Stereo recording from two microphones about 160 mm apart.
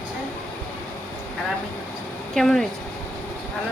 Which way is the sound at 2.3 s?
Centre (ahead or behind).